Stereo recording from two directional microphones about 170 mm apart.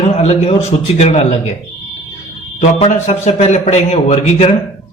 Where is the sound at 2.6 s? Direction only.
45° left (ahead or behind).